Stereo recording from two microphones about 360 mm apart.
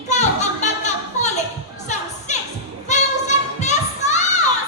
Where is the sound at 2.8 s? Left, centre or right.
Centre.